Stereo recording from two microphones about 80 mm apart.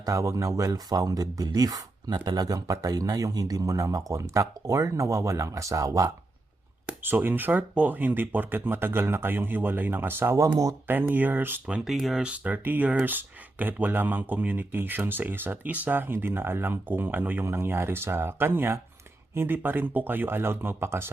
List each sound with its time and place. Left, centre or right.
0.0 s speech: right
6.8 s speech: right
11.9 s speech: centre
12.2 s speech: centre